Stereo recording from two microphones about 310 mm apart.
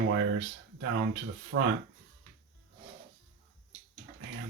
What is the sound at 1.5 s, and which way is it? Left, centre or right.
Speech, right.